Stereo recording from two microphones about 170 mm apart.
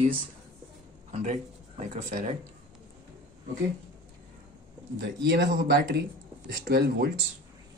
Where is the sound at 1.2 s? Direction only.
45° right (ahead or behind).